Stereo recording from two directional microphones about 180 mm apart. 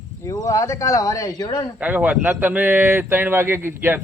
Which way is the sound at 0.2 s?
20° left (ahead or behind).